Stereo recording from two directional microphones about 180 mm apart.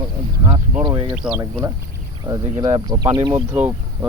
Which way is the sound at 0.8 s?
25° right (ahead or behind).